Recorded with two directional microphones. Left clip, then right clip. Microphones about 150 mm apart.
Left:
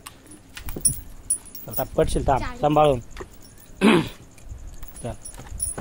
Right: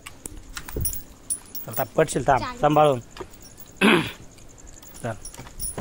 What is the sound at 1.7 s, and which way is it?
Speech, 15° left (ahead or behind).